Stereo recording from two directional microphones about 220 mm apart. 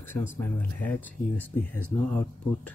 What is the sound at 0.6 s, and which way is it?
Speech, 10° left (ahead or behind).